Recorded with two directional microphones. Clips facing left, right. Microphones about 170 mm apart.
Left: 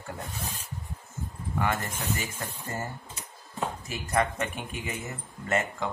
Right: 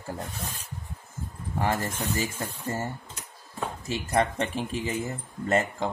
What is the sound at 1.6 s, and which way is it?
Speech, 30° right (ahead or behind).